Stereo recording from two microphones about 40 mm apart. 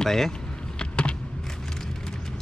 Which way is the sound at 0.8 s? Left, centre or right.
Left.